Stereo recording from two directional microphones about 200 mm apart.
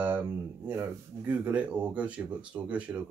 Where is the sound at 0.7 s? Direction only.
10° right (ahead or behind).